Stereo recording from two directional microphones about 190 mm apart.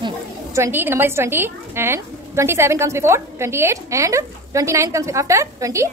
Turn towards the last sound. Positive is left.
turn(degrees=-15)  # may be behind; listen again after turning